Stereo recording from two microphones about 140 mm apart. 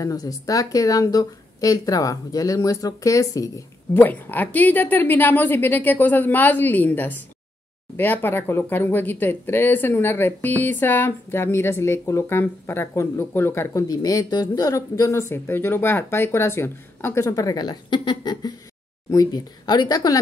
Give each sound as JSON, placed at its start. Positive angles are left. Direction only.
{"t": 0.0, "sound": "speech", "side_deg": 25}